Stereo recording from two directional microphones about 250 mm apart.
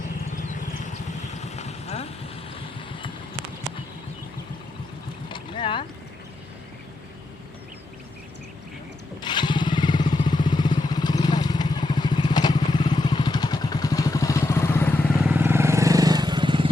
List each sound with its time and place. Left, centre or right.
0.5 s vehicle: left
5.3 s boat: centre
9.2 s motorcycle: centre
15.3 s vehicle: centre